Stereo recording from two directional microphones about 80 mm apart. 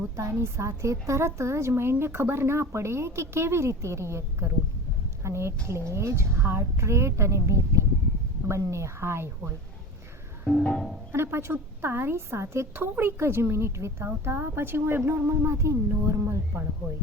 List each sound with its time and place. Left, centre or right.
0.2 s a woman's voice: right
10.6 s music: centre
11.1 s a woman's voice: right